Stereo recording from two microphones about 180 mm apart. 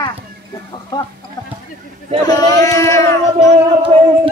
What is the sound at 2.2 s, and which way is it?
Child singing, 20° left (ahead or behind).